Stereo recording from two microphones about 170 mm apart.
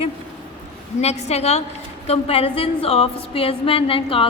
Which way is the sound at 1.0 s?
40° left (ahead or behind).